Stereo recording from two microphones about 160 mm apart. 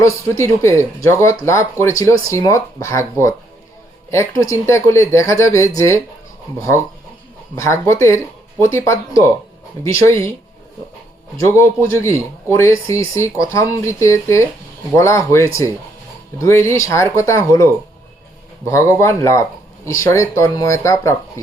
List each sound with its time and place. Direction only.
0.0 s speech: 15° left (ahead or behind)
7.5 s speech: 20° left (ahead or behind)
11.3 s speech: 15° left (ahead or behind)